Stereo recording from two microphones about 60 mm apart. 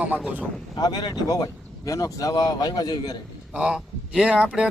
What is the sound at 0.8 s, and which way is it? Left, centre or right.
Speech, left.